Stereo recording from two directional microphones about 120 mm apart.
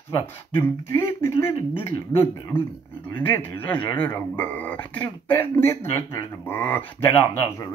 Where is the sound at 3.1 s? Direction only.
15° left (ahead or behind).